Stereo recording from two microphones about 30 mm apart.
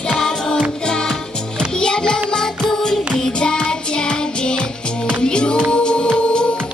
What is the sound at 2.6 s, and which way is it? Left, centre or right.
Music, centre.